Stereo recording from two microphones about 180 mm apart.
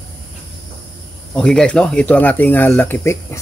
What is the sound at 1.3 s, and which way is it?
Speech, 5° left (ahead or behind).